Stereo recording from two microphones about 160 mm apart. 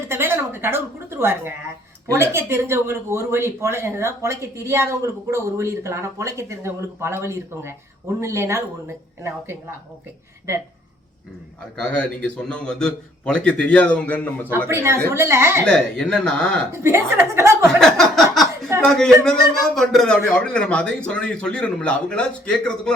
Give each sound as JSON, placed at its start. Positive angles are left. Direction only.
{"t": 0.1, "sound": "a woman's voice", "side_deg": -15}
{"t": 11.8, "sound": "a man's voice", "side_deg": 5}
{"t": 14.7, "sound": "speech", "side_deg": -15}
{"t": 15.6, "sound": "a man's voice", "side_deg": 5}
{"t": 16.7, "sound": "speech", "side_deg": -15}
{"t": 17.7, "sound": "a sound", "side_deg": 0}
{"t": 18.9, "sound": "a man's voice", "side_deg": 5}